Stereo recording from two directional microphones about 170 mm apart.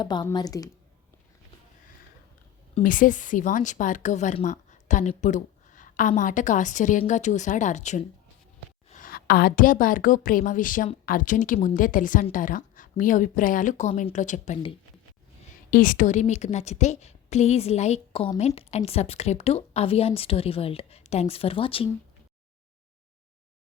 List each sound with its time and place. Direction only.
0.0 s a woman's voice: 25° left (ahead or behind)
2.8 s a woman's voice: 50° left (ahead or behind)
8.9 s a woman's voice: 55° left (ahead or behind)
15.7 s a woman's voice: 50° left (ahead or behind); by 21.8 s 30° left (ahead or behind)